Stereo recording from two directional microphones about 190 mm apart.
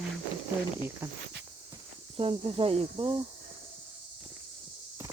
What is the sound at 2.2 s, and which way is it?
Speech, 30° right (ahead or behind).